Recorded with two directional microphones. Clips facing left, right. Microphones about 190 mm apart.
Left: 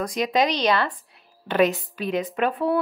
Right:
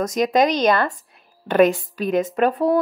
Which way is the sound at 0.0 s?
45° right (ahead or behind).